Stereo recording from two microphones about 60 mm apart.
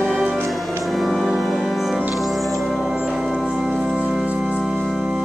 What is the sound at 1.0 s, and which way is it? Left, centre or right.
Music, centre.